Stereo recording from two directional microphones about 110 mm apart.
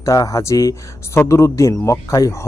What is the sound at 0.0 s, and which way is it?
Speech, 30° left (ahead or behind).